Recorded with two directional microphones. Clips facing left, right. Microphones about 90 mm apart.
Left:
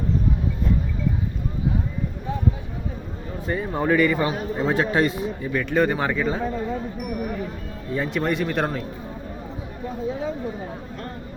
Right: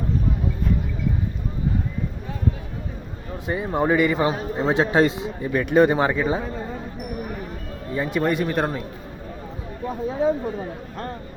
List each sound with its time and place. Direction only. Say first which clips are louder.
3.4 s a man's voice: right 2 dB; 15° right (ahead or behind)
7.9 s speech: right 2 dB; 5° right (ahead or behind)